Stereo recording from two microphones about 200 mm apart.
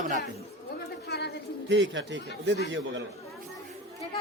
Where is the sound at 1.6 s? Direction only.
65° right (ahead or behind).